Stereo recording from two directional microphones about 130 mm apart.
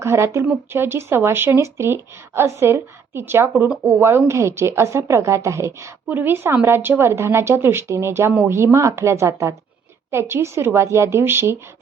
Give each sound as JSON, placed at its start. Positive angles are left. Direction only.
{"t": 0.0, "sound": "a woman's voice", "side_deg": -20}
{"t": 3.5, "sound": "speech", "side_deg": -5}
{"t": 3.8, "sound": "a woman's voice", "side_deg": -20}